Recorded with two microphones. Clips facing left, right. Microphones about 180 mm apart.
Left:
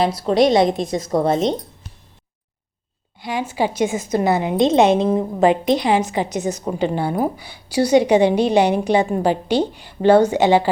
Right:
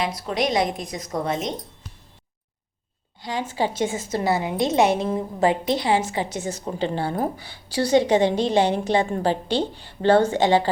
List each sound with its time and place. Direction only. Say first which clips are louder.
0.0 s a woman's voice: left 9 dB; 30° left (ahead or behind)
3.2 s a woman's voice: left 4 dB; 15° left (ahead or behind)